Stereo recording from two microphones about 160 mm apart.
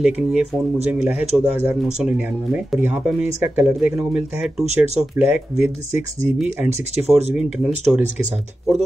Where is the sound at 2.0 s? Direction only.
5° right (ahead or behind).